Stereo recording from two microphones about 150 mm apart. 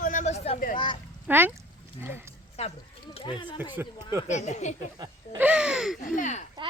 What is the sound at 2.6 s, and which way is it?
Speech, 45° left (ahead or behind).